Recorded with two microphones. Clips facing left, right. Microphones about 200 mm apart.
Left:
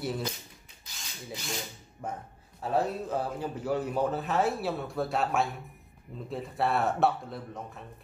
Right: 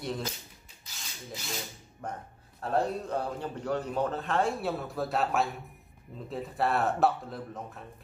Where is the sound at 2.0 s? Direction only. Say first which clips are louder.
Left 1 dB; 5° left (ahead or behind).